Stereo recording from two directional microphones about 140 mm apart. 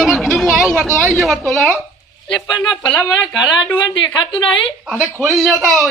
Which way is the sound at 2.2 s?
30° left (ahead or behind).